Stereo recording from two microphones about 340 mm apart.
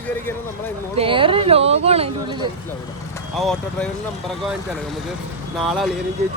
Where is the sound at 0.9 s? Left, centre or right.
Centre.